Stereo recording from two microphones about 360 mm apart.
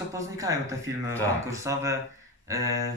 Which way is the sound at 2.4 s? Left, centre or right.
Centre.